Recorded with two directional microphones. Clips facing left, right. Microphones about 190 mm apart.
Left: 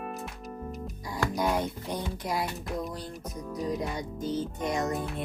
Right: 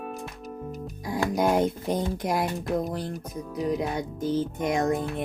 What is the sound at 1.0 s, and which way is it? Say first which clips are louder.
Speech: right 5 dB; 50° right (ahead or behind).